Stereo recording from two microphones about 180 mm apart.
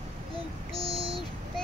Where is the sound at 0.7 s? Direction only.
30° right (ahead or behind).